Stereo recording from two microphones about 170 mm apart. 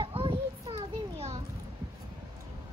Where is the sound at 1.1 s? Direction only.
40° right (ahead or behind).